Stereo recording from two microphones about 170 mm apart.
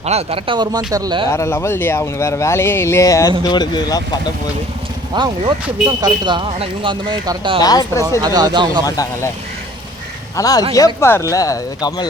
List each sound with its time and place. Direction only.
0.0 s speech: 40° right (ahead or behind)
1.3 s speech: 15° left (ahead or behind)
5.1 s speech: 25° right (ahead or behind)
7.6 s speech: 20° left (ahead or behind)
8.2 s speech: 25° right (ahead or behind)
8.8 s speech: 20° left (ahead or behind)
10.3 s speech: 20° left (ahead or behind)